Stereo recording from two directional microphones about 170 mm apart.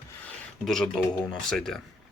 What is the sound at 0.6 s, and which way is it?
Speech, centre (ahead or behind).